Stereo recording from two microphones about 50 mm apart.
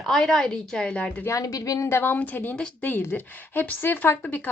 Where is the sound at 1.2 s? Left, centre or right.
Left.